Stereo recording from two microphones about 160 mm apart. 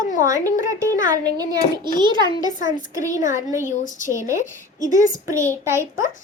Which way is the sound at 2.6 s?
55° left (ahead or behind).